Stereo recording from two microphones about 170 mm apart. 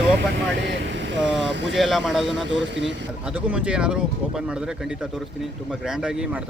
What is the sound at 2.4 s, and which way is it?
Speech, 90° right.